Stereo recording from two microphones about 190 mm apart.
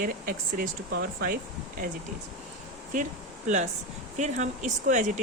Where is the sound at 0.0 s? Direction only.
45° right (ahead or behind).